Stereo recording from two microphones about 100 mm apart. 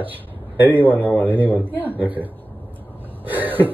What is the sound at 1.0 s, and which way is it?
Speech, 15° left (ahead or behind).